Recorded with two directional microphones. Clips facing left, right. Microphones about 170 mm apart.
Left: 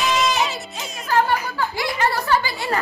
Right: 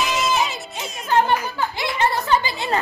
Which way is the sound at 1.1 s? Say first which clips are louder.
Right 1 dB; 20° right (ahead or behind).